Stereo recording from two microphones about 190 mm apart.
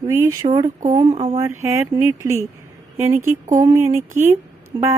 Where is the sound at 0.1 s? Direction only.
15° right (ahead or behind).